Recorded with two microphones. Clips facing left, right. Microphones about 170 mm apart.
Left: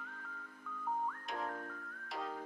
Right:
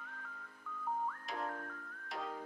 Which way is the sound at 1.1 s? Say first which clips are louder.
Even; centre (ahead or behind).